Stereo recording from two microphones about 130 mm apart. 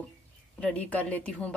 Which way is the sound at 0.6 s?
10° left (ahead or behind).